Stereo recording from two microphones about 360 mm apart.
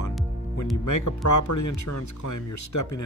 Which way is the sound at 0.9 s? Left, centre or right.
Left.